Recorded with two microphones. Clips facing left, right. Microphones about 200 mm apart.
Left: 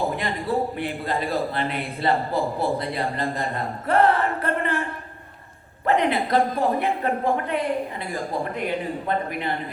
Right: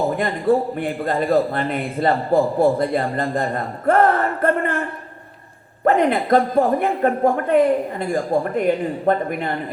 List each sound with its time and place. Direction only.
0.2 s a man's voice: 50° right (ahead or behind)
5.8 s a man's voice: 50° right (ahead or behind)